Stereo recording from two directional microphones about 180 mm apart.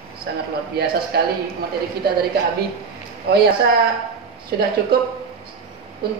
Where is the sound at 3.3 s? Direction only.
65° right (ahead or behind).